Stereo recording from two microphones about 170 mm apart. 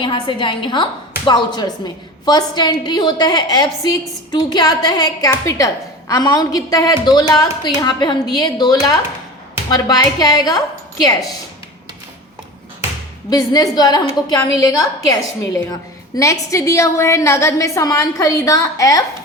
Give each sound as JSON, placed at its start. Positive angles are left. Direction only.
{"t": 0.0, "sound": "a woman's voice", "side_deg": 30}
{"t": 13.3, "sound": "a woman's voice", "side_deg": 20}